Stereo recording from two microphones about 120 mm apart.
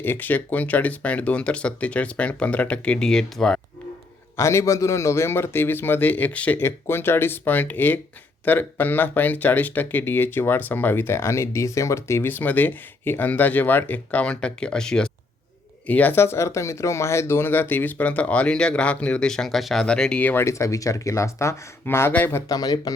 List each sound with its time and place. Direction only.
0.0 s speech: 15° left (ahead or behind)
4.4 s a man's voice: 25° left (ahead or behind)
22.5 s speech: 30° left (ahead or behind)